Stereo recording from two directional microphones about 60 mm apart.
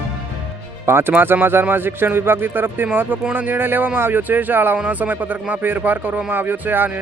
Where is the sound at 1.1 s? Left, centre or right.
Right.